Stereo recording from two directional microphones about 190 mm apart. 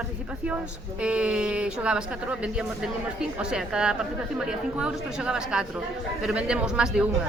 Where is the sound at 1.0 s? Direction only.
5° right (ahead or behind).